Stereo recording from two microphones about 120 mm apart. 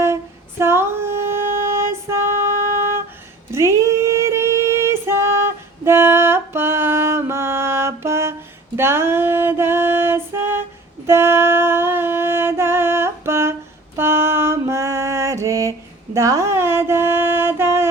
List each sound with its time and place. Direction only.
0.6 s music: 20° right (ahead or behind)
3.5 s female singing: 20° right (ahead or behind)
11.0 s a sound: 20° right (ahead or behind)